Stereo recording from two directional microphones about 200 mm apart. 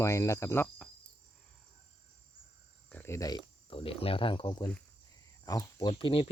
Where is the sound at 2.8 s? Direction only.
10° left (ahead or behind).